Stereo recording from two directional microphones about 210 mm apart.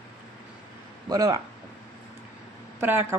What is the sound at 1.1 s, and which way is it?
Speech, 15° right (ahead or behind).